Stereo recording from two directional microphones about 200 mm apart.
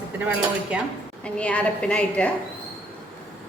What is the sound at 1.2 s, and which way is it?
A woman's voice, 5° left (ahead or behind).